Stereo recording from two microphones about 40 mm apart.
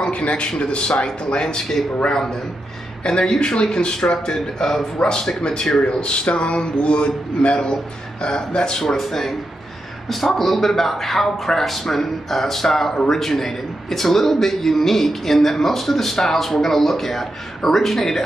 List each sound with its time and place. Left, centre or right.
0.1 s a man's voice: left; by 18.2 s centre